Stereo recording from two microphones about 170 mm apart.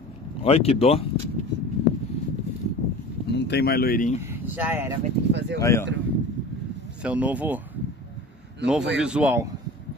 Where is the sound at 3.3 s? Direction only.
80° left; by 4.1 s 55° left (ahead or behind).